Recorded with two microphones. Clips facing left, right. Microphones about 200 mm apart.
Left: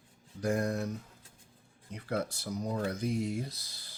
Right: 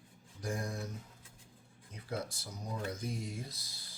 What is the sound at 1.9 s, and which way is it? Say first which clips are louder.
Speech: left 6 dB; 65° left (ahead or behind).